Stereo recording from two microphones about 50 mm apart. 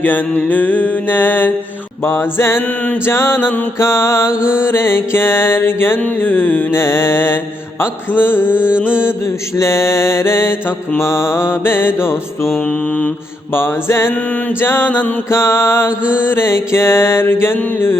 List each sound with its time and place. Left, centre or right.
0.0 s mantra: left
3.1 s mantra: left
3.8 s mantra: left
6.8 s mantra: left
8.5 s mantra: right
9.6 s mantra: left
13.6 s mantra: left
15.3 s mantra: left